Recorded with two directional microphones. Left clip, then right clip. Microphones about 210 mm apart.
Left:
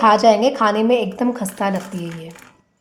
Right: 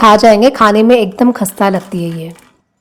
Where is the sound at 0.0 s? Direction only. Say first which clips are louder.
Right 7 dB; 35° right (ahead or behind).